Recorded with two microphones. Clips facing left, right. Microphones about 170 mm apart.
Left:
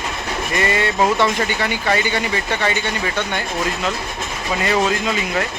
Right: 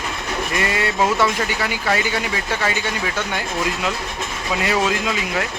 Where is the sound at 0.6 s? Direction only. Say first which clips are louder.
Left 3 dB; 5° right (ahead or behind).